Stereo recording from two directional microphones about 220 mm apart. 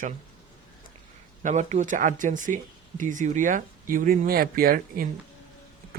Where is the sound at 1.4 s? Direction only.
30° right (ahead or behind).